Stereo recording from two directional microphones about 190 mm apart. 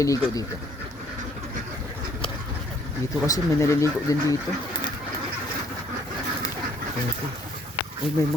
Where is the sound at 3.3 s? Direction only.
15° left (ahead or behind).